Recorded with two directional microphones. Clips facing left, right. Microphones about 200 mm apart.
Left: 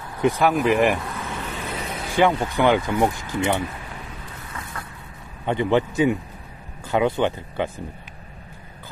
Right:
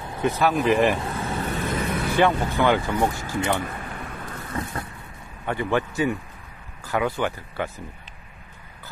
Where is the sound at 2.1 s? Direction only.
15° left (ahead or behind).